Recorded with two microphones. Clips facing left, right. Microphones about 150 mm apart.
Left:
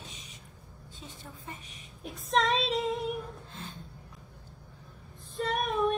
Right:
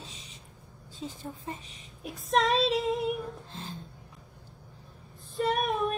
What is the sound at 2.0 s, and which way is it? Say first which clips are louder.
Speech: right 2 dB; centre (ahead or behind).